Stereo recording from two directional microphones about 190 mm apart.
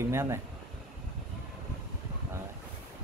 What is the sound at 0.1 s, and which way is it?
Speech, 15° right (ahead or behind).